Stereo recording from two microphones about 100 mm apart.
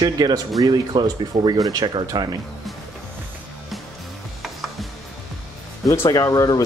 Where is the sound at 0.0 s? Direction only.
45° right (ahead or behind).